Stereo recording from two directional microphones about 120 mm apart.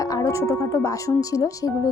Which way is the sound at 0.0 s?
30° left (ahead or behind).